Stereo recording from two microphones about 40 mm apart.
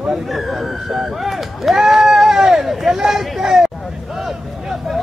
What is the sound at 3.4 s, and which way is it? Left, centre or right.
Hubbub, centre.